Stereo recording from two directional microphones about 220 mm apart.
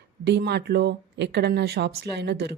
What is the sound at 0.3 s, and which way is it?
A woman's voice, 50° right (ahead or behind).